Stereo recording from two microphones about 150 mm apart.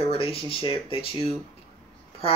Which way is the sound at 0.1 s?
40° left (ahead or behind).